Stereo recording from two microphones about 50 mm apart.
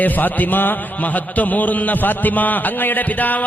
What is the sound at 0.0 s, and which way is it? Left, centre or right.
A man's voice, left.